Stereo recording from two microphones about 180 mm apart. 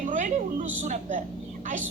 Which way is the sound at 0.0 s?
45° right (ahead or behind).